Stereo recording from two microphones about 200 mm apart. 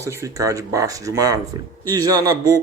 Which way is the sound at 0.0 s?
15° right (ahead or behind).